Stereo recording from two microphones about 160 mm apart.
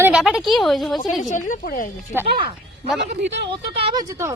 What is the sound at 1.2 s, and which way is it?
Speech, 55° left (ahead or behind).